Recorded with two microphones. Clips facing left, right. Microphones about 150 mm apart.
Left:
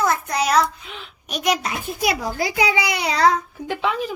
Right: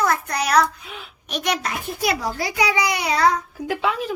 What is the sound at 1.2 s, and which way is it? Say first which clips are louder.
Speech: left 2 dB; 5° left (ahead or behind).